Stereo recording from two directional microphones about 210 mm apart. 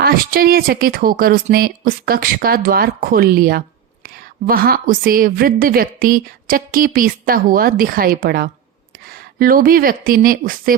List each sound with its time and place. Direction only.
0.0 s a woman's voice: 45° right (ahead or behind)